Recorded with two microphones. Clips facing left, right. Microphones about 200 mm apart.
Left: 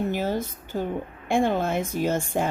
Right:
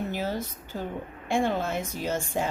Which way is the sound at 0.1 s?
50° left (ahead or behind).